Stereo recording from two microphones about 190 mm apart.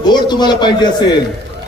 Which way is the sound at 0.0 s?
20° left (ahead or behind).